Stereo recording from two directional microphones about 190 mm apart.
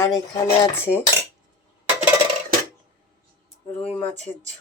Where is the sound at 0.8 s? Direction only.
10° right (ahead or behind).